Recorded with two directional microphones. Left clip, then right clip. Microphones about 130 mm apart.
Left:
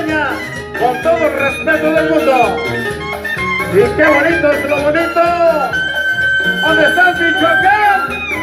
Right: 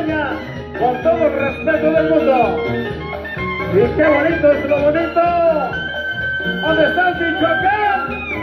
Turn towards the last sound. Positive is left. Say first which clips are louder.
# left 5 dB
turn(degrees=-40)  # may be behind; listen again after turning